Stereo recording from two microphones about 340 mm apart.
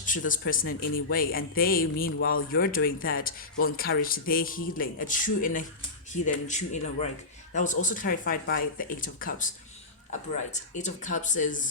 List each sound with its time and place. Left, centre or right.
0.2 s speech: left